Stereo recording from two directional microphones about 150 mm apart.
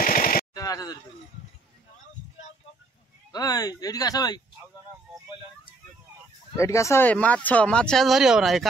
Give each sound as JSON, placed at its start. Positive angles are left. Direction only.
{"t": 0.0, "sound": "machine gun", "side_deg": 70}
{"t": 0.6, "sound": "a sound", "side_deg": 25}
{"t": 3.3, "sound": "speech", "side_deg": 25}
{"t": 6.5, "sound": "speech", "side_deg": 20}